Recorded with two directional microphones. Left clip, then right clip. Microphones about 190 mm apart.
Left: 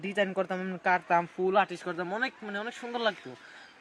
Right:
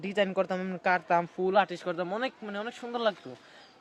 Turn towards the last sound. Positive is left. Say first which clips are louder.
# right 1 dB
turn(degrees=0)  # may be behind; listen again after turning